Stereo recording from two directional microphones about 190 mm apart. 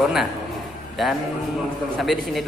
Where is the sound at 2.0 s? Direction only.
Centre (ahead or behind).